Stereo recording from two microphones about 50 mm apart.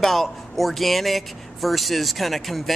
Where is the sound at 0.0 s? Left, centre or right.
Centre.